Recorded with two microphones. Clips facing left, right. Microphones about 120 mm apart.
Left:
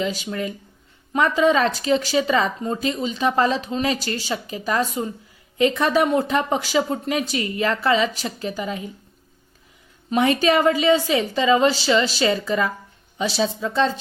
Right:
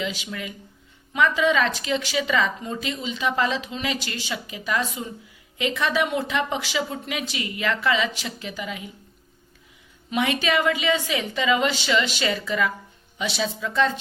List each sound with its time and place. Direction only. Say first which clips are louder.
0.0 s speech: left 5 dB; 40° left (ahead or behind)
10.1 s speech: left 5 dB; 40° left (ahead or behind)